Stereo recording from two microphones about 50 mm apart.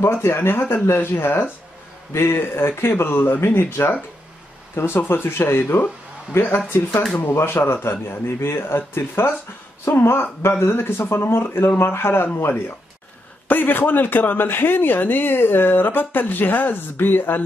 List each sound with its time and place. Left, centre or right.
0.0 s speech: left